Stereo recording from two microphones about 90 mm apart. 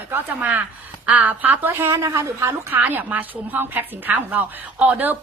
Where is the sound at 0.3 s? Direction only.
15° right (ahead or behind).